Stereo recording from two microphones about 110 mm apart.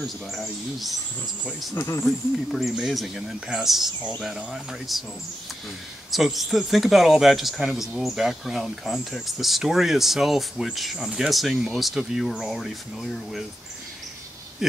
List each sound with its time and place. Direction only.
0.0 s speech: centre (ahead or behind)
1.8 s speech: 25° left (ahead or behind)
2.0 s speech: centre (ahead or behind)
6.1 s speech: centre (ahead or behind)
14.6 s speech: 5° right (ahead or behind)